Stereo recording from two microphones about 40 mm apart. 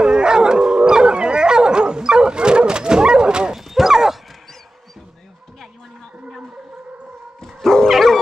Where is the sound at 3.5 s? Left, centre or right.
Centre.